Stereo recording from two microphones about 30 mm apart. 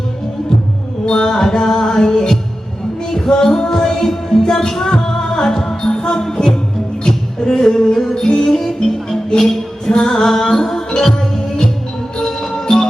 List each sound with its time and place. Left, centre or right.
1.0 s music: left
7.0 s a sound: left
8.4 s music: centre